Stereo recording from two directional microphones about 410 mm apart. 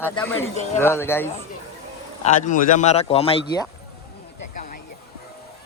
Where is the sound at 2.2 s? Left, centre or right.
Centre.